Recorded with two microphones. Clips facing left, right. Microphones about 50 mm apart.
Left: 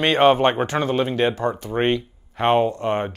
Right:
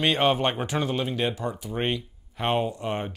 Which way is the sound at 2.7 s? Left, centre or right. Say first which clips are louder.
Left 7 dB; left.